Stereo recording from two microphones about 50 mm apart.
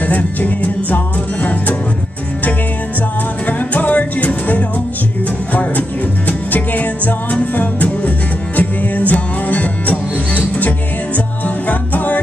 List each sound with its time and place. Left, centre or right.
0.0 s music: left
3.4 s music: left